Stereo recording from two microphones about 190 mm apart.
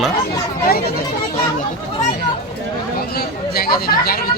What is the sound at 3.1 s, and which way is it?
Chatter, 55° left (ahead or behind).